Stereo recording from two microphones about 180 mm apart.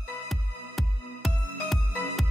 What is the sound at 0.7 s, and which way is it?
Music, centre (ahead or behind).